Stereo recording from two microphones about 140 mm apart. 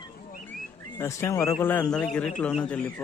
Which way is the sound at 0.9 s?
20° left (ahead or behind).